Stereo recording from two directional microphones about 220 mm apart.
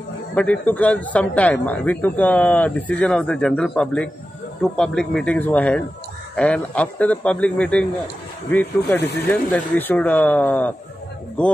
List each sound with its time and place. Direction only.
0.3 s a man's voice: 5° left (ahead or behind)
8.9 s speech: 50° left (ahead or behind)
9.3 s a man's voice: 10° left (ahead or behind)